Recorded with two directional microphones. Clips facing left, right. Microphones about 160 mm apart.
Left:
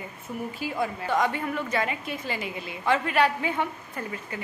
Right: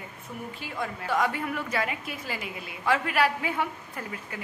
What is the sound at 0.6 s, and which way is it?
A woman's voice, 5° left (ahead or behind).